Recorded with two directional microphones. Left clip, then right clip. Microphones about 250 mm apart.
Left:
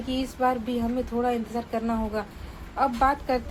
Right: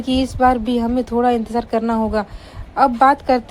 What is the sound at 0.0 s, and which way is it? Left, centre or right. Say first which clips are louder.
A woman's voice: right 10 dB; right.